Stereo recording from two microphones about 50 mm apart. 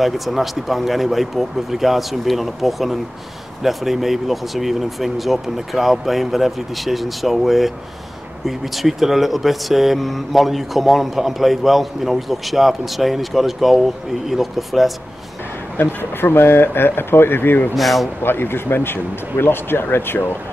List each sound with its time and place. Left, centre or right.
0.0 s speech: centre
15.8 s speech: left
17.7 s speech: centre
18.2 s speech: left